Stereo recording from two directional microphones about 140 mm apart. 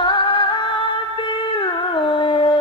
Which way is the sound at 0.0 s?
35° left (ahead or behind).